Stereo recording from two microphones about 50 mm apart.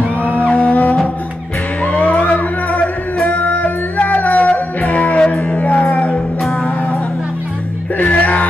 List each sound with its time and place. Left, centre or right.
0.2 s music: left
8.0 s music: left